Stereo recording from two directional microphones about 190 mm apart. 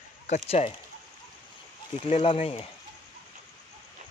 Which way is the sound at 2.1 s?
30° left (ahead or behind).